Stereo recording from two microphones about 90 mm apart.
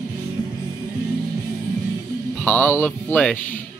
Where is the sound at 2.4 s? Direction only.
20° left (ahead or behind).